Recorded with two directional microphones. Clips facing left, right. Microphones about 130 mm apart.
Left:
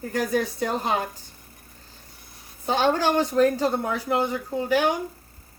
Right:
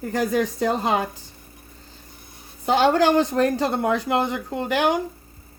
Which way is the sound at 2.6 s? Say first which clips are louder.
Right 4 dB; 75° right (ahead or behind).